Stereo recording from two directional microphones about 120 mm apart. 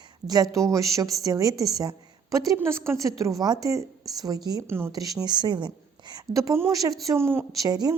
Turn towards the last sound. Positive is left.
turn(degrees=-30)  # may be behind; listen again after turning